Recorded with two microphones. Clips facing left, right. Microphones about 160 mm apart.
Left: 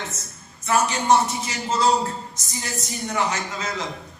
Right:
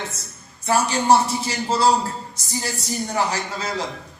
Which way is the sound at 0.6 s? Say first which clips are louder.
Right 1 dB; 30° right (ahead or behind).